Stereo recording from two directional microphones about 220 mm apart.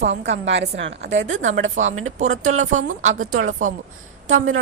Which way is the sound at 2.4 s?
35° right (ahead or behind).